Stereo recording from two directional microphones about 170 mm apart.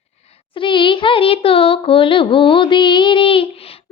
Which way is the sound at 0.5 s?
30° left (ahead or behind).